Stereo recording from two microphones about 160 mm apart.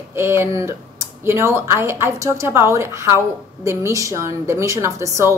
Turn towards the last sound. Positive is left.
turn(degrees=-20)  # may be behind; listen again after turning